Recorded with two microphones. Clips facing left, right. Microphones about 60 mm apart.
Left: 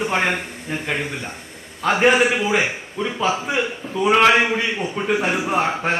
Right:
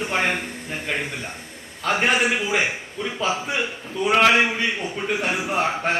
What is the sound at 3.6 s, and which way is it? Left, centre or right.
Speech, left.